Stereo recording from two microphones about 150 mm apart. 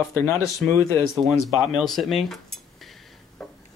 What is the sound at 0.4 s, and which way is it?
Speech, centre (ahead or behind).